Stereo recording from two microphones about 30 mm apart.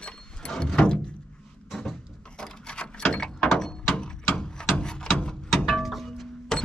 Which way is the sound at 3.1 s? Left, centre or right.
Left.